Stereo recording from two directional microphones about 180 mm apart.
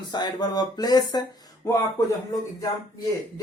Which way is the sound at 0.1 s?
25° left (ahead or behind).